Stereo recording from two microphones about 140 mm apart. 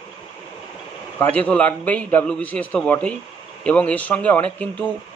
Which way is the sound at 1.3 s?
10° left (ahead or behind).